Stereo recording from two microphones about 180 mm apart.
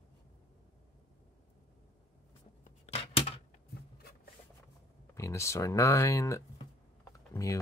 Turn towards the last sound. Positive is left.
turn(degrees=20)  # may be behind; listen again after turning